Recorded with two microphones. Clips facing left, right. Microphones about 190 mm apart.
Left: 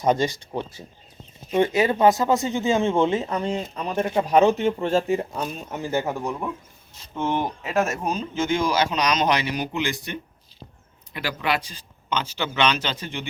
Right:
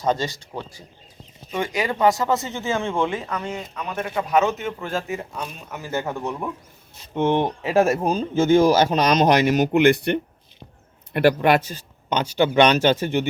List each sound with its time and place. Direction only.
0.0 s speech: 15° left (ahead or behind)
1.5 s speech: 25° left (ahead or behind)
5.9 s speech: 15° left (ahead or behind)
6.1 s speech: 5° left (ahead or behind)
7.1 s speech: 25° right (ahead or behind); by 13.2 s 45° right (ahead or behind)